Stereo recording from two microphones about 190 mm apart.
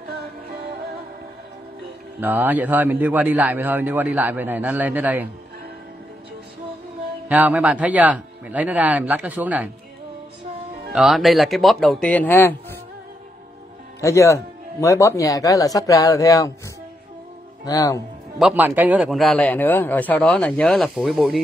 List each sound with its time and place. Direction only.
0.1 s music: 55° right (ahead or behind)
2.1 s a man's voice: 10° right (ahead or behind)
7.2 s a man's voice: 10° right (ahead or behind)
10.9 s speech: centre (ahead or behind)
14.0 s speech: 15° left (ahead or behind)
17.6 s speech: 20° left (ahead or behind)
18.4 s speech: 10° right (ahead or behind)